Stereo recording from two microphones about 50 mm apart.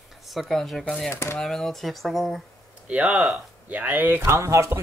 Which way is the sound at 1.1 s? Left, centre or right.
Left.